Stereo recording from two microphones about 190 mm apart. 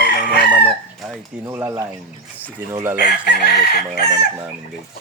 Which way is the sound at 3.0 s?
60° left (ahead or behind).